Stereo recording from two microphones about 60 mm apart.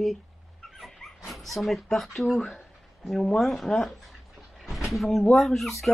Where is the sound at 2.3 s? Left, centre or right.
Centre.